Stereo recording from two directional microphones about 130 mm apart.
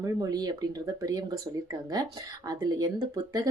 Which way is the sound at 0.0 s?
30° right (ahead or behind).